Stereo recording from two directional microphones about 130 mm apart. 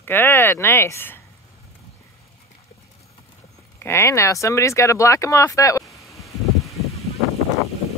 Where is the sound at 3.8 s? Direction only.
20° left (ahead or behind).